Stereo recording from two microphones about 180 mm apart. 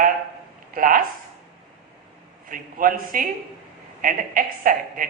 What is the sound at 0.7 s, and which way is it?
Speech, 50° right (ahead or behind).